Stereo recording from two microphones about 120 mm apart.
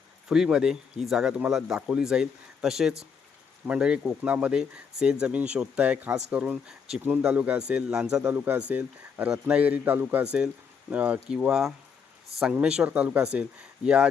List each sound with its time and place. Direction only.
0.3 s speech: 5° right (ahead or behind)
8.2 s speech: 15° right (ahead or behind)